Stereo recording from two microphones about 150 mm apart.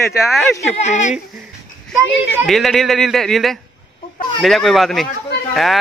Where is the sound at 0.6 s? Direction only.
50° left (ahead or behind).